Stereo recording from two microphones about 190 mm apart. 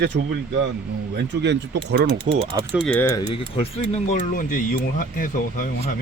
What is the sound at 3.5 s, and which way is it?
Speech, 30° left (ahead or behind).